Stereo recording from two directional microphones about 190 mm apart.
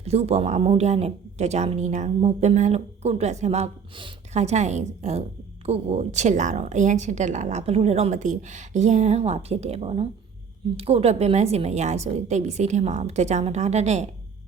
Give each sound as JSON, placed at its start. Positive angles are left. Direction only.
{"t": 0.0, "sound": "speech", "side_deg": -35}